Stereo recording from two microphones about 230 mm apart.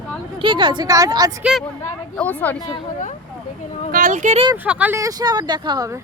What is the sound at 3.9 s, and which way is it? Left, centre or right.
Speech, right.